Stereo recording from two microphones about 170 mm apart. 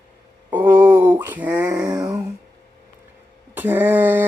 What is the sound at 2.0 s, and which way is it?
Speech, 20° right (ahead or behind).